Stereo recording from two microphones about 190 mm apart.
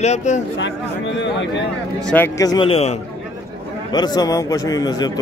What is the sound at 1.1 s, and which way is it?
Speech, 70° left (ahead or behind).